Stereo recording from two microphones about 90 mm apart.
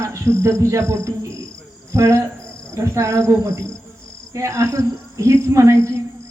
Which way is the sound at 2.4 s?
10° left (ahead or behind).